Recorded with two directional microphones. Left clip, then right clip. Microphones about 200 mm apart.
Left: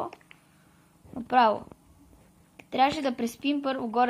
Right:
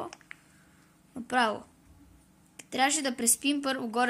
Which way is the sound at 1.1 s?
5° right (ahead or behind).